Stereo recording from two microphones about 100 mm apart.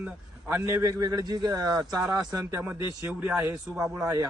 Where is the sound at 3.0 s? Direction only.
15° right (ahead or behind).